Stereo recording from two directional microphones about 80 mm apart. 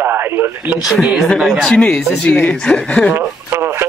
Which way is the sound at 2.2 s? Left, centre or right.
Left.